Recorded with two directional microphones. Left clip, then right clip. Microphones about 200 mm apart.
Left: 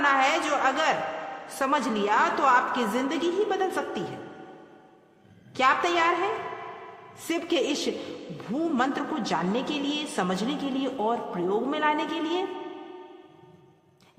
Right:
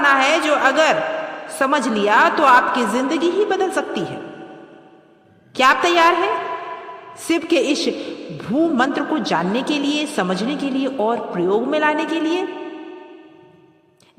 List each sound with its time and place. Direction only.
0.0 s a sound: 35° right (ahead or behind)
1.5 s a man's voice: 35° right (ahead or behind)
5.5 s a man's voice: 35° right (ahead or behind)
7.3 s a man's voice: 35° right (ahead or behind)